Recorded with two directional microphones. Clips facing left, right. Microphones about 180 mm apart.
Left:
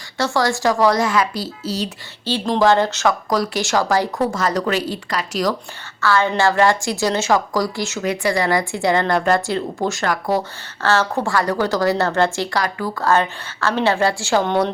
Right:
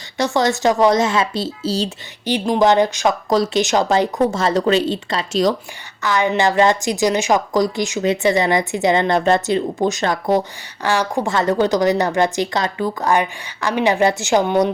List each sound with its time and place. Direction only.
0.2 s a woman's voice: 20° right (ahead or behind)
2.2 s a woman's voice: 15° right (ahead or behind)